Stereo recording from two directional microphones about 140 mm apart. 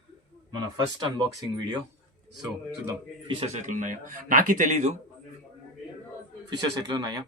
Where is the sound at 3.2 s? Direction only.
50° right (ahead or behind).